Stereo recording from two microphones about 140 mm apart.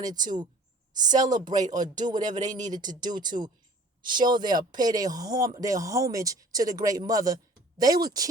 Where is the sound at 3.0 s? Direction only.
30° right (ahead or behind).